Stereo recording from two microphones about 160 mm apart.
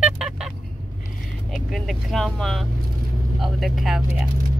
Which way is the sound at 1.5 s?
Centre (ahead or behind).